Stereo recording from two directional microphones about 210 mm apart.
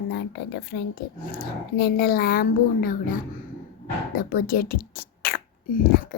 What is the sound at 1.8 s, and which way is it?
Speech, 45° left (ahead or behind).